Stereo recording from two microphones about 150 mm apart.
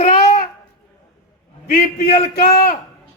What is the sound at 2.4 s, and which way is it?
Speech, 80° left.